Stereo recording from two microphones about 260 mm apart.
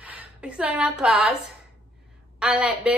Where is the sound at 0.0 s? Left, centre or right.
Centre.